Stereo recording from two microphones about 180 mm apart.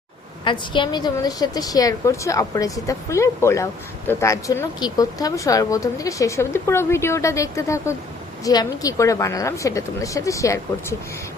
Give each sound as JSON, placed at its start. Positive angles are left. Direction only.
{"t": 0.4, "sound": "a woman's voice", "side_deg": 25}